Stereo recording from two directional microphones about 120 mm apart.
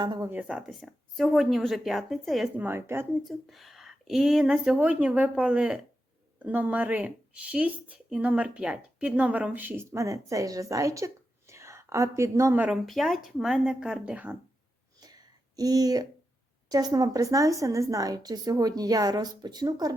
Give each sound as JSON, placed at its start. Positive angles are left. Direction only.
{"t": 0.0, "sound": "a woman's voice", "side_deg": -40}
{"t": 0.3, "sound": "a woman's voice", "side_deg": -10}
{"t": 0.7, "sound": "speech", "side_deg": 0}
{"t": 2.6, "sound": "a woman's voice", "side_deg": -20}
{"t": 3.2, "sound": "a woman's voice", "side_deg": 0}
{"t": 12.6, "sound": "speech", "side_deg": 0}
{"t": 15.0, "sound": "a sound", "side_deg": -30}
{"t": 16.6, "sound": "a woman's voice", "side_deg": -35}